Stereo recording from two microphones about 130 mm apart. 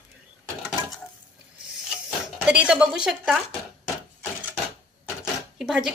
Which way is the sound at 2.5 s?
10° right (ahead or behind).